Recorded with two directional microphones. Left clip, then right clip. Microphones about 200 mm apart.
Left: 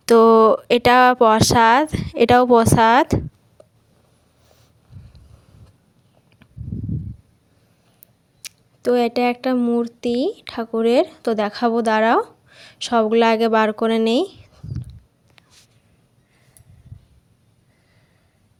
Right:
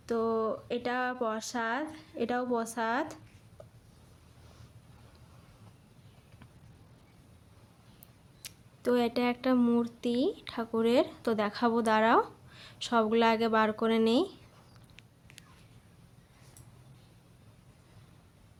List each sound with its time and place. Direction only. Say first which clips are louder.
0.0 s speech: left 19 dB; 50° left (ahead or behind)
3.6 s a sound: left 4 dB; 25° left (ahead or behind)
8.4 s speech: left 11 dB; 30° left (ahead or behind)